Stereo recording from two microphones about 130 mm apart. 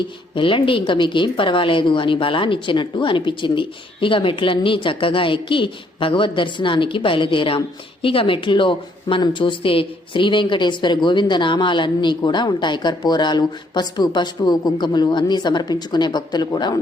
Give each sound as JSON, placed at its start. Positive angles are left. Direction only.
{"t": 0.3, "sound": "speech", "side_deg": 40}